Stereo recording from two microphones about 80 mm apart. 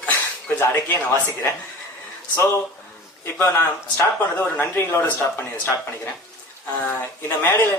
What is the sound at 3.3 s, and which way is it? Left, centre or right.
Speech, left.